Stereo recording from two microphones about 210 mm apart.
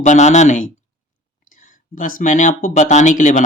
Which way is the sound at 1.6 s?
40° left (ahead or behind).